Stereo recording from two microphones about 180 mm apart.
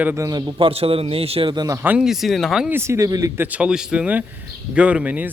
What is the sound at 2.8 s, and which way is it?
Speech, 15° right (ahead or behind).